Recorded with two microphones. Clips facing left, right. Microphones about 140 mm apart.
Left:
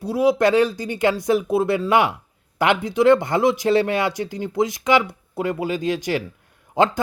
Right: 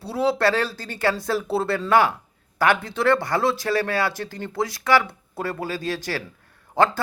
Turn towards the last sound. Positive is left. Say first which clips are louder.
# left 1 dB
turn(degrees=15)  # may be behind; listen again after turning